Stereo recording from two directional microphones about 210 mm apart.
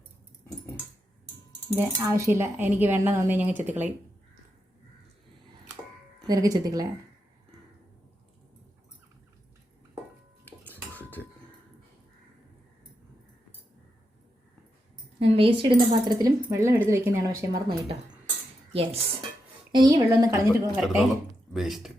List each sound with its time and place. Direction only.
1.7 s speech: 15° right (ahead or behind)
6.2 s speech: 15° right (ahead or behind)
10.4 s cutlery: 10° left (ahead or behind)
15.2 s a sound: 30° right (ahead or behind)
15.9 s speech: 20° right (ahead or behind)
18.7 s speech: 25° right (ahead or behind)
20.7 s speech: centre (ahead or behind)